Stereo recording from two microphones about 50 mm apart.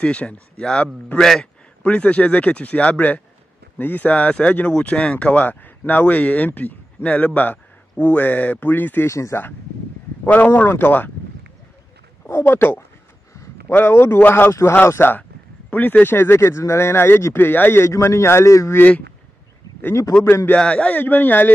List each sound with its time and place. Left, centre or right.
0.0 s a man's voice: left
1.1 s a man's voice: centre
1.8 s a man's voice: left
9.0 s speech: left
10.2 s speech: left
12.3 s speech: left
15.0 s speech: left
16.2 s speech: left
19.9 s speech: left
20.2 s speech: left
20.5 s a man's voice: left
21.0 s speech: left